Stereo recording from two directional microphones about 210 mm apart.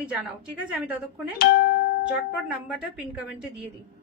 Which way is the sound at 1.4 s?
45° left (ahead or behind).